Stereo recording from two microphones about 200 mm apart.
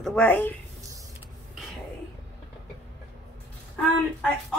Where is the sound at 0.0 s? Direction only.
5° left (ahead or behind).